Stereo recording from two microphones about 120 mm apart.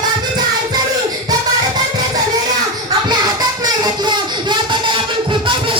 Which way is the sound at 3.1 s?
35° right (ahead or behind).